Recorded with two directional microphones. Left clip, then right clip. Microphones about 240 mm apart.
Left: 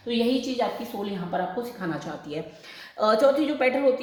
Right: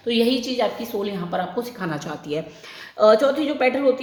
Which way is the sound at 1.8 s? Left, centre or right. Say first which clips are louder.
Right 3 dB; right.